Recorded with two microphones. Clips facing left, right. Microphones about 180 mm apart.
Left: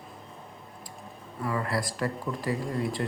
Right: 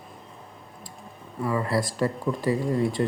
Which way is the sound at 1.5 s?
25° right (ahead or behind).